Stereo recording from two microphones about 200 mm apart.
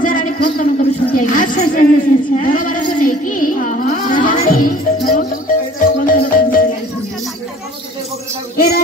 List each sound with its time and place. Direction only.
0.0 s a sound: 40° left (ahead or behind)
5.0 s music: 45° left (ahead or behind)
8.5 s music: 50° left (ahead or behind)